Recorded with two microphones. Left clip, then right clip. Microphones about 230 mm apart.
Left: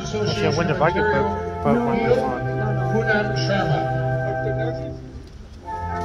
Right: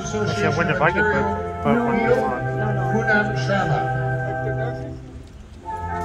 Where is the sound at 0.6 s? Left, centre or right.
Centre.